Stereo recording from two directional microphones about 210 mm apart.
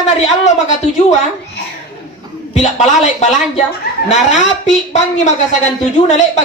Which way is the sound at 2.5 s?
30° left (ahead or behind).